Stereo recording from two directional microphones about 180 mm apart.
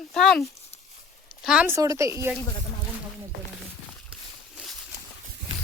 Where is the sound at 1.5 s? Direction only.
10° right (ahead or behind).